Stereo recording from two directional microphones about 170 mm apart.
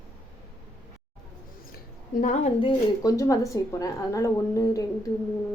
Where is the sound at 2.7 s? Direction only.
20° left (ahead or behind).